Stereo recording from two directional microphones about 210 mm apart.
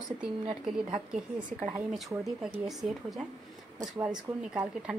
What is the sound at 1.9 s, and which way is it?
Speech, centre (ahead or behind).